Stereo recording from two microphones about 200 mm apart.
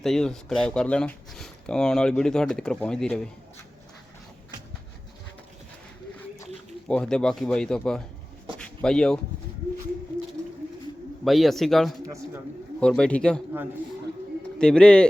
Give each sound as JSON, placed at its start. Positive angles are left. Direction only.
{"t": 0.0, "sound": "speech", "side_deg": 0}
{"t": 6.8, "sound": "speech", "side_deg": 5}
{"t": 8.5, "sound": "a sound", "side_deg": 5}
{"t": 11.3, "sound": "speech", "side_deg": 0}
{"t": 12.0, "sound": "speech", "side_deg": -15}
{"t": 12.8, "sound": "speech", "side_deg": 5}
{"t": 14.6, "sound": "speech", "side_deg": 5}